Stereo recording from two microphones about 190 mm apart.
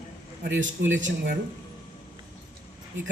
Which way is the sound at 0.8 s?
80° right.